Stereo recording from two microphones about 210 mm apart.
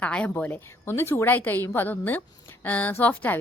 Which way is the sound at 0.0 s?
5° left (ahead or behind).